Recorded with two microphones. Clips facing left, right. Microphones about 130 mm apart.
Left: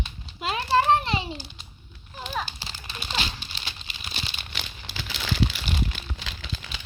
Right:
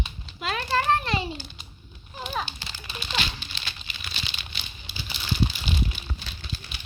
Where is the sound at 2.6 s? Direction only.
30° left (ahead or behind).